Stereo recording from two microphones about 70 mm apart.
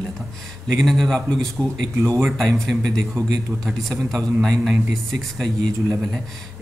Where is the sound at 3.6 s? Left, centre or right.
Centre.